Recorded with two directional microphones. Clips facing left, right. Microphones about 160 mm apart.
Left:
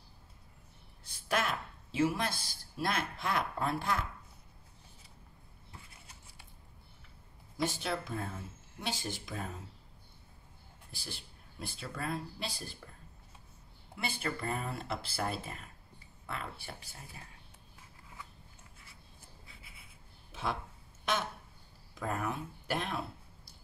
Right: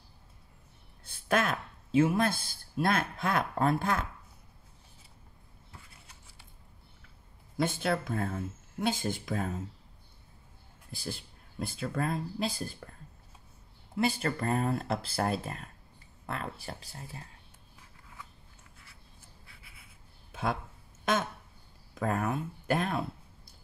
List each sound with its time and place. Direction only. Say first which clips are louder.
1.0 s speech: right 5 dB; 50° right (ahead or behind)
7.5 s speech: right 5 dB; 55° right (ahead or behind)
10.9 s speech: right 8 dB; 45° right (ahead or behind)
13.9 s speech: right 8 dB; 40° right (ahead or behind)
21.0 s a sound: right 5 dB; 50° right (ahead or behind)
21.9 s speech: right 5 dB; 50° right (ahead or behind)